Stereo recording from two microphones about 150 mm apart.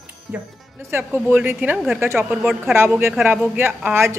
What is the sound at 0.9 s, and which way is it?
A woman's voice, 15° right (ahead or behind).